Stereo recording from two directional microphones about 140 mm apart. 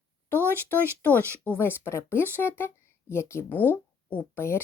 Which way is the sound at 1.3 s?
15° left (ahead or behind).